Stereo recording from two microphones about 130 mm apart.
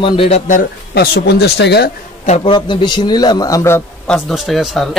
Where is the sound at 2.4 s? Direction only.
40° left (ahead or behind).